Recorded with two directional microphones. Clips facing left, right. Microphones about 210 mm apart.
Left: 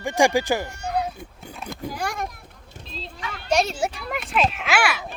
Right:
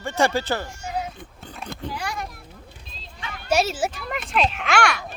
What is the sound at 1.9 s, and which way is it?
Children playing, 50° left (ahead or behind).